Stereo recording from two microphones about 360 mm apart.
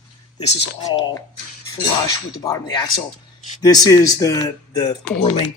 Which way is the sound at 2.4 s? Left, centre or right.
Centre.